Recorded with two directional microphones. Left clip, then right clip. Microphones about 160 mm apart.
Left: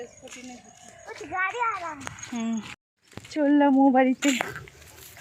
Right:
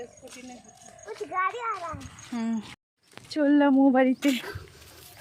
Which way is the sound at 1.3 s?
80° right.